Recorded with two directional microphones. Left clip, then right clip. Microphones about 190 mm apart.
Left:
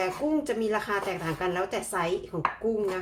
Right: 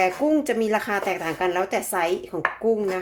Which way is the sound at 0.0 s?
45° right (ahead or behind).